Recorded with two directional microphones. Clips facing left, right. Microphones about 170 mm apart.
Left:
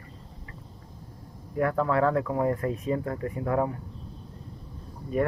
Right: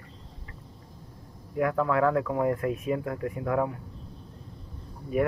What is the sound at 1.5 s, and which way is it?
Speech, 5° right (ahead or behind).